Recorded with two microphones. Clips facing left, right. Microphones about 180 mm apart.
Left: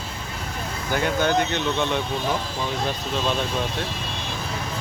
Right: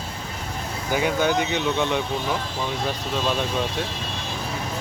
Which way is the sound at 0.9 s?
10° right (ahead or behind).